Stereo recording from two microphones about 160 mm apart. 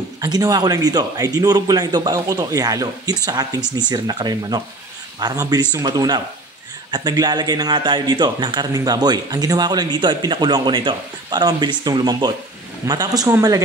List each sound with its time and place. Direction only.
0.2 s speech: 25° right (ahead or behind)